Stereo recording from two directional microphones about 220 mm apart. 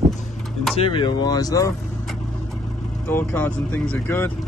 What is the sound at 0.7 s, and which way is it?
Speech, 25° left (ahead or behind).